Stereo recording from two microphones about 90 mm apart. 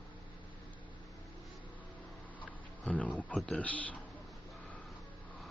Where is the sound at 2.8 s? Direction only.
15° left (ahead or behind).